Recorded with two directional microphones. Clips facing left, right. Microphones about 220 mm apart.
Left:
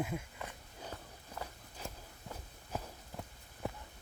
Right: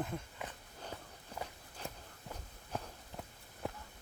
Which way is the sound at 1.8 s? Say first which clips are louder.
Even; centre (ahead or behind).